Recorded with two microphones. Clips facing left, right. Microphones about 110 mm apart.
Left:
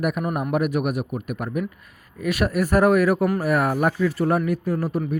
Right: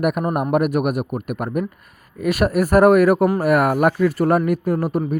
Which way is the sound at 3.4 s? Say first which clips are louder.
Right 5 dB; 65° right (ahead or behind).